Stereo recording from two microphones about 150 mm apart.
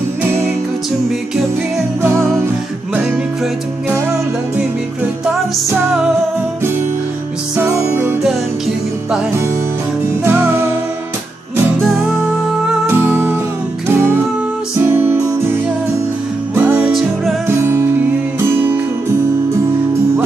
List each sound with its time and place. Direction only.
2.0 s music: 15° right (ahead or behind)
7.5 s music: 15° right (ahead or behind)
10.2 s music: 15° right (ahead or behind)
12.6 s music: 10° right (ahead or behind)
14.9 s music: 15° right (ahead or behind)
17.6 s music: 15° right (ahead or behind)